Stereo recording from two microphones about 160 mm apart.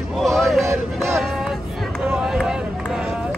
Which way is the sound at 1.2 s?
Centre (ahead or behind).